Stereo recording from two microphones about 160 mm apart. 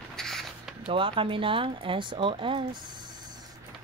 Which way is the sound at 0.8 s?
35° right (ahead or behind).